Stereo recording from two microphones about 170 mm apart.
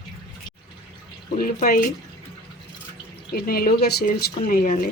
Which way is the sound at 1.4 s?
55° left (ahead or behind).